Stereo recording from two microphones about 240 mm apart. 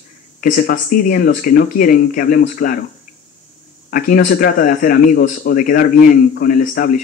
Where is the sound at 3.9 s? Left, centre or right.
Left.